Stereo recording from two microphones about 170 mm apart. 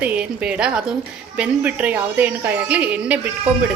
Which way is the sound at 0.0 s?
10° right (ahead or behind).